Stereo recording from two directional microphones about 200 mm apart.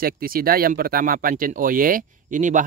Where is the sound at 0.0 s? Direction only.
45° right (ahead or behind).